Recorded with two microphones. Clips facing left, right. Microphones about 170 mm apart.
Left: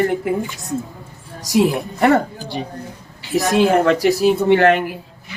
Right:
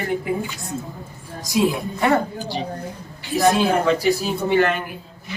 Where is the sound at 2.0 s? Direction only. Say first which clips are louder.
Left 5 dB; 60° left (ahead or behind).